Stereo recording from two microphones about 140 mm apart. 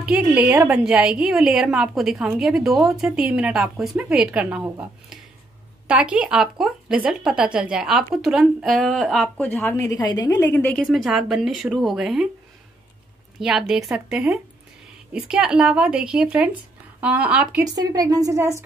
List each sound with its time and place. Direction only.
0.0 s a woman's voice: 10° right (ahead or behind); by 9.8 s 10° left (ahead or behind)
9.8 s a woman's voice: 30° left (ahead or behind)
10.6 s a woman's voice: 5° left (ahead or behind)
13.4 s a woman's voice: 5° right (ahead or behind)
17.9 s speech: 25° right (ahead or behind)